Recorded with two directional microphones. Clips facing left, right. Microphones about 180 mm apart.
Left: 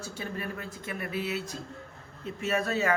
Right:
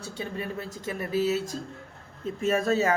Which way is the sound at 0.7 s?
35° right (ahead or behind).